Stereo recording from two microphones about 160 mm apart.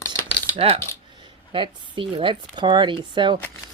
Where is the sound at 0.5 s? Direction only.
35° right (ahead or behind).